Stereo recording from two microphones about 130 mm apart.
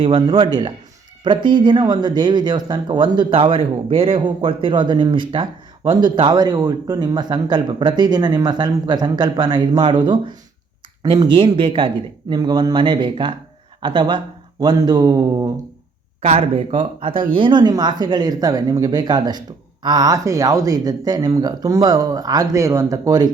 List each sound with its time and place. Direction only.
0.0 s speech: 40° right (ahead or behind)
16.2 s speech: 50° right (ahead or behind); by 23.3 s 30° right (ahead or behind)